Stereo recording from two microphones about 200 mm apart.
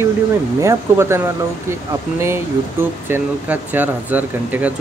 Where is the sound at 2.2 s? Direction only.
10° right (ahead or behind).